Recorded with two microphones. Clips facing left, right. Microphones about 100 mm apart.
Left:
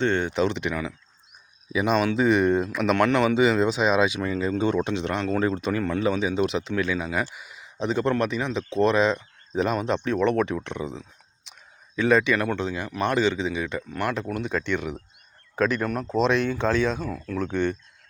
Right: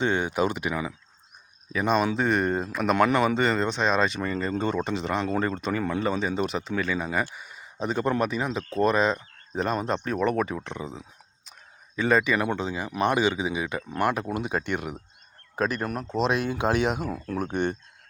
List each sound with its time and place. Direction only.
0.0 s speech: 10° right (ahead or behind)
1.7 s speech: 5° left (ahead or behind)
16.0 s speech: 5° right (ahead or behind); by 17.2 s 20° right (ahead or behind)
17.2 s speech: 40° right (ahead or behind)